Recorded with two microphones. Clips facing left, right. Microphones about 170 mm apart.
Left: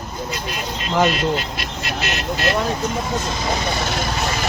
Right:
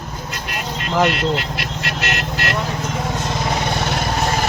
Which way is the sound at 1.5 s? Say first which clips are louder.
Right 1 dB; 70° right (ahead or behind).